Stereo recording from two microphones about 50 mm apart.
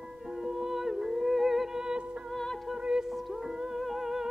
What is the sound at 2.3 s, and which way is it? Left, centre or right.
Music, centre.